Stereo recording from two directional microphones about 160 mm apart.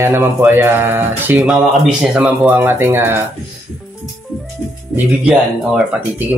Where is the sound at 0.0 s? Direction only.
15° right (ahead or behind).